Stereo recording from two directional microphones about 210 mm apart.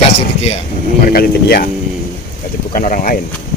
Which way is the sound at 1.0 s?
45° left (ahead or behind).